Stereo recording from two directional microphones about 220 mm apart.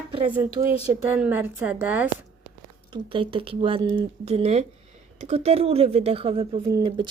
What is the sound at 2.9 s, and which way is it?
Speech, 25° right (ahead or behind).